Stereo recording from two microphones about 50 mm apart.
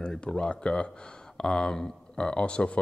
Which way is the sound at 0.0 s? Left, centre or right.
Centre.